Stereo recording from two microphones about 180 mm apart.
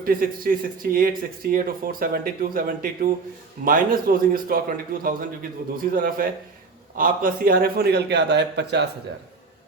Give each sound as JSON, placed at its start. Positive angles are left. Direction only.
{"t": 0.0, "sound": "a man's voice", "side_deg": -50}